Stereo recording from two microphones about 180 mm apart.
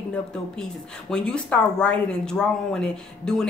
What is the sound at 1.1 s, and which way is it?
Speech, 5° left (ahead or behind).